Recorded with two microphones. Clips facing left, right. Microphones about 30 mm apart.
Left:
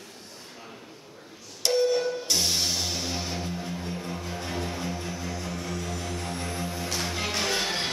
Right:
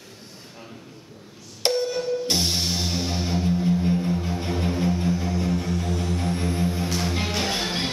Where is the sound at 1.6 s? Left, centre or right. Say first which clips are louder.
Right 2 dB; right.